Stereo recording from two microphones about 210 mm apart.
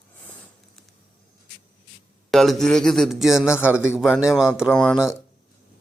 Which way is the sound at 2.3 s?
Centre (ahead or behind).